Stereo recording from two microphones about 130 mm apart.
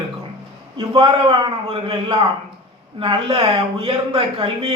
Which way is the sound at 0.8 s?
40° right (ahead or behind).